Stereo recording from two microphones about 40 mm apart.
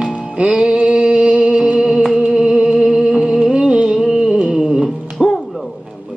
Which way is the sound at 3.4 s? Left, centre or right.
Right.